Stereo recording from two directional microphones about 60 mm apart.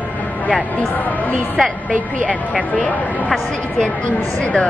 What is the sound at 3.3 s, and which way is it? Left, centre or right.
Speech, centre.